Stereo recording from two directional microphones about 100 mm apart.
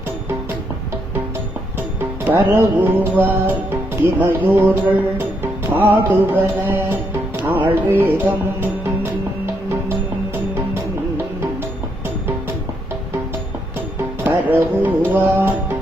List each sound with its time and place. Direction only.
2.0 s music: 20° right (ahead or behind)
14.3 s music: 20° right (ahead or behind)